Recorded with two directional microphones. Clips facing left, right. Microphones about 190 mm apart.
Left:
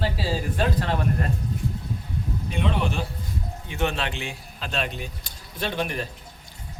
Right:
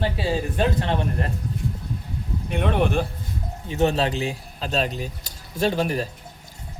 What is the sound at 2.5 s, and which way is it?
Speech, 60° right (ahead or behind).